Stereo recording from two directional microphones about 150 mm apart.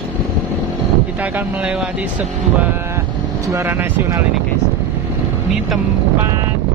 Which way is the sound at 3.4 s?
15° right (ahead or behind).